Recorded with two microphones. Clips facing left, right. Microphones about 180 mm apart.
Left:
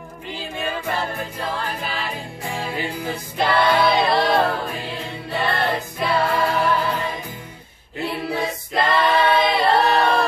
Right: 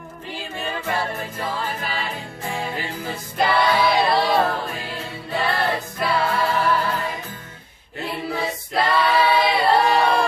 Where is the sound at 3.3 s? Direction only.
Centre (ahead or behind).